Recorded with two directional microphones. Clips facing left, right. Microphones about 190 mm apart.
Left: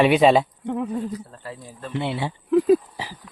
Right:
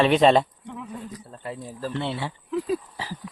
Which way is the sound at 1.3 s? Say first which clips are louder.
Right 2 dB; 25° right (ahead or behind).